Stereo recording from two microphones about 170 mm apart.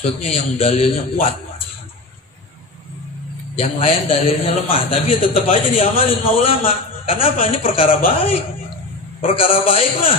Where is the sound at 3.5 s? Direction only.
35° left (ahead or behind).